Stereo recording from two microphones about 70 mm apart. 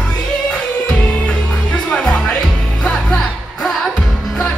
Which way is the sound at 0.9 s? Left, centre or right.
Centre.